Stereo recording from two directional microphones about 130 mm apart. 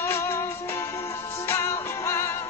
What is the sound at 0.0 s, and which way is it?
Music, 20° left (ahead or behind).